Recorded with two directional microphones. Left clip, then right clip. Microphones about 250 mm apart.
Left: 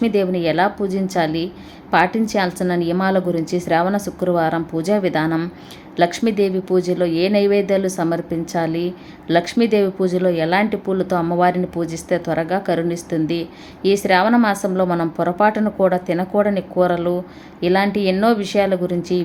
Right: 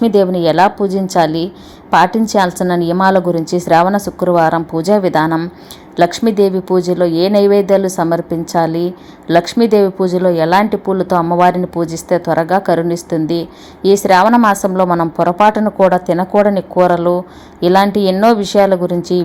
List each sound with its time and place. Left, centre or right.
0.0 s speech: centre